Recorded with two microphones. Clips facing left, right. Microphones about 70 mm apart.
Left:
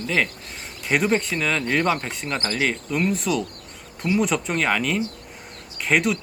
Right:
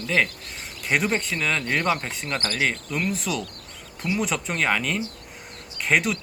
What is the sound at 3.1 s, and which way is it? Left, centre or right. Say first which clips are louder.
Speech: left 4 dB; centre.